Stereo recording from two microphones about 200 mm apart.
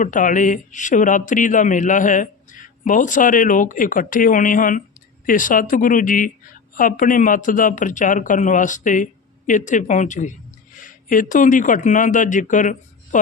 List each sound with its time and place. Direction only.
0.0 s a man's voice: 40° left (ahead or behind)